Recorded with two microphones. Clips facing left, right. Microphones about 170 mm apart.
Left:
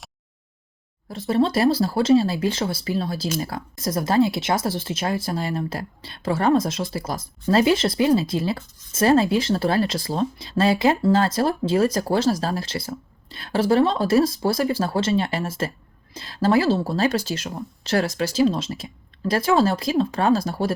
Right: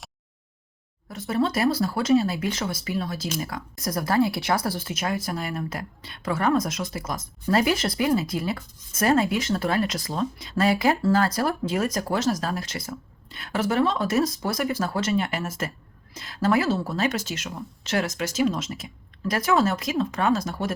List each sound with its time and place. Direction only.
1.1 s speech: 30° left (ahead or behind)